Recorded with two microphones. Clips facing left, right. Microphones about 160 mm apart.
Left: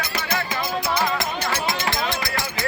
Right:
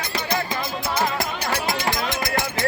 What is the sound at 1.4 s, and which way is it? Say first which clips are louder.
Music: even; 35° right (ahead or behind).